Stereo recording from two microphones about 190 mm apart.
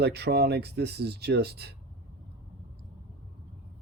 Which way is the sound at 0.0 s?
60° right (ahead or behind).